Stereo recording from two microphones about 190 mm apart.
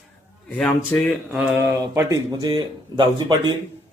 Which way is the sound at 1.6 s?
15° right (ahead or behind).